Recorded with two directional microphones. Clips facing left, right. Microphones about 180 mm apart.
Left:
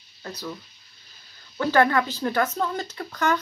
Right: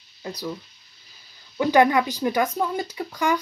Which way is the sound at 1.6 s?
15° right (ahead or behind).